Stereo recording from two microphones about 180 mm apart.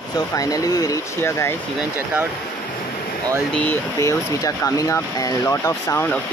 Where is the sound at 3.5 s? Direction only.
15° left (ahead or behind).